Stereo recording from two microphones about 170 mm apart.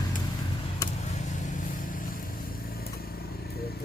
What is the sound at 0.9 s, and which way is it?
Vehicle, 40° left (ahead or behind).